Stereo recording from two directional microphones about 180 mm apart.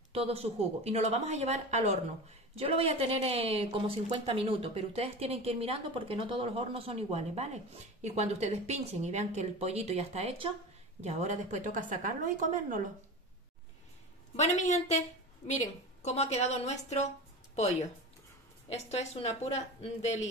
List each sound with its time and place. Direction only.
0.1 s a woman's voice: 35° right (ahead or behind)
14.3 s a woman's voice: 40° left (ahead or behind)